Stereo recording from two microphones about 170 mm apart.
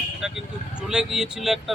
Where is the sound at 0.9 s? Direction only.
5° right (ahead or behind).